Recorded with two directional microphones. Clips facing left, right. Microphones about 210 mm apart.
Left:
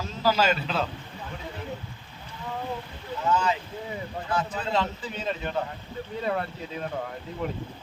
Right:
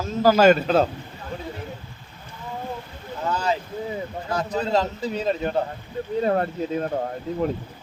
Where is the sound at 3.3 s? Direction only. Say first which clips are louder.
Even; 35° right (ahead or behind).